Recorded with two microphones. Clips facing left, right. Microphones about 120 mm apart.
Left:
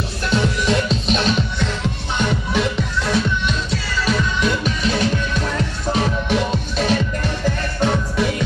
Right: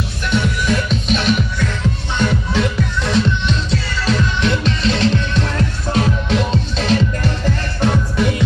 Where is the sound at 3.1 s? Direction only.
10° left (ahead or behind).